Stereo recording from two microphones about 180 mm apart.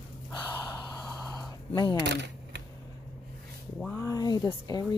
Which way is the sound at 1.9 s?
75° right (ahead or behind).